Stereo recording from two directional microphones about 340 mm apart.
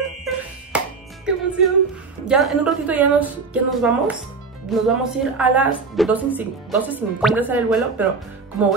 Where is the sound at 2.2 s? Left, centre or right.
Centre.